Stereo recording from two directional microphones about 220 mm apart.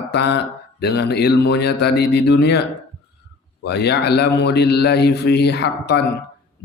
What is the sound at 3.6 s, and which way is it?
Speech, 50° left (ahead or behind).